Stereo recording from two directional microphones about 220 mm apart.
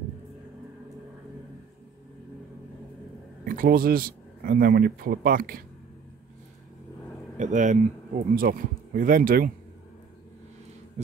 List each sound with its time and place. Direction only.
3.4 s speech: 40° right (ahead or behind)
7.3 s speech: 35° right (ahead or behind)